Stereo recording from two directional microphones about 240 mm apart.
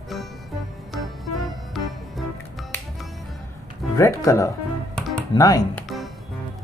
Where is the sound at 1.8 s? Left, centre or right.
Centre.